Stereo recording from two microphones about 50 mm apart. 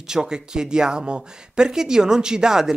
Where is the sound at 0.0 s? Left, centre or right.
Centre.